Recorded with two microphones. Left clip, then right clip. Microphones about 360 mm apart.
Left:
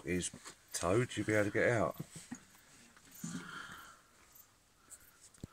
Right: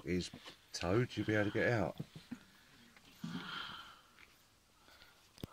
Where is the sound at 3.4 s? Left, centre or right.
Centre.